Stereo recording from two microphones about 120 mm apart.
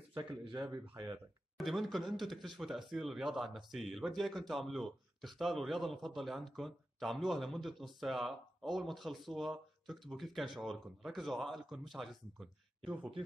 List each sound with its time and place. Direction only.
0.1 s speech: 40° right (ahead or behind)
1.6 s speech: centre (ahead or behind)